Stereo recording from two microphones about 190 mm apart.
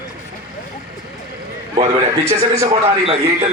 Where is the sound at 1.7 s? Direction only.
30° right (ahead or behind).